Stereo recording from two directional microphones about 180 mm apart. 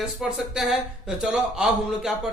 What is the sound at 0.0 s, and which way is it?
A man's voice, 5° right (ahead or behind).